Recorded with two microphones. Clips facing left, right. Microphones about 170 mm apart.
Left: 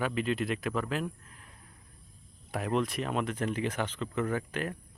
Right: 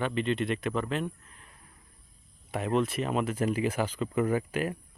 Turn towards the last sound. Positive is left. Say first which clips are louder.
# right 4 dB
turn(degrees=-10)  # may be behind; listen again after turning